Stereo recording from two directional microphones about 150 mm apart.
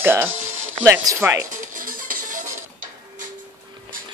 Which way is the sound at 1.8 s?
65° right (ahead or behind).